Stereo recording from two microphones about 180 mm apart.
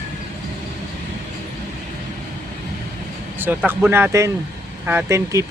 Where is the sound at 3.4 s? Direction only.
10° right (ahead or behind).